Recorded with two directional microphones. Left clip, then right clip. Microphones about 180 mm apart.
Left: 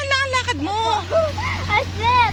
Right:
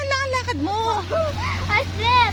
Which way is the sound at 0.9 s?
40° left (ahead or behind).